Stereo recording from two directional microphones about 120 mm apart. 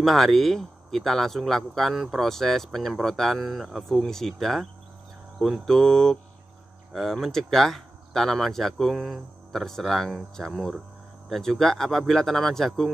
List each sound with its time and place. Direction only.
0.0 s speech: centre (ahead or behind)